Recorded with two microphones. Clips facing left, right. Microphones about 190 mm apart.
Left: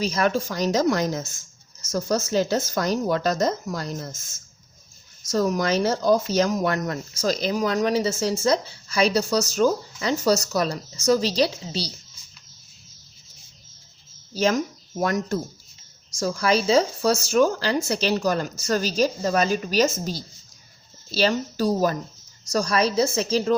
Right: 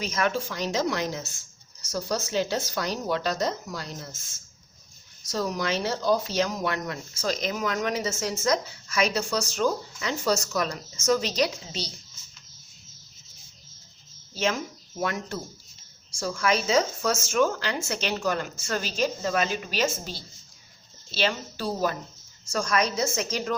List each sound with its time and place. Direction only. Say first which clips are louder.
0.0 s speech: left 5 dB; 35° left (ahead or behind)
5.2 s speech: left 6 dB; 45° left (ahead or behind)
14.3 s speech: left 6 dB; 40° left (ahead or behind)